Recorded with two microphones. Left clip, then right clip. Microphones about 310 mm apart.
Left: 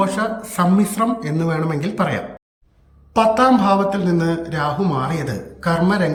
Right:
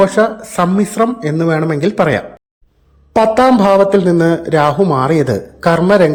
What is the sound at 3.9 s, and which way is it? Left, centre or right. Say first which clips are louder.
A man's voice: right 9 dB; centre.